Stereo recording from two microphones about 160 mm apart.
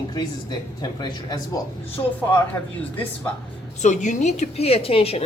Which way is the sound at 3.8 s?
50° left (ahead or behind).